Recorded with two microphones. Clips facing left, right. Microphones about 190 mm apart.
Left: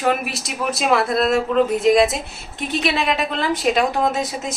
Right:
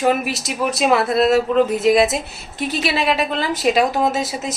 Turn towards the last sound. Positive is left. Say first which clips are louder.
# right 1 dB
turn(degrees=-5)  # may be behind; listen again after turning